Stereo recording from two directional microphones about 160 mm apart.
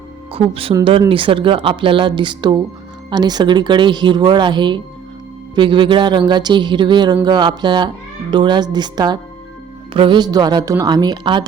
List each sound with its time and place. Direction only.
0.3 s speech: 35° right (ahead or behind)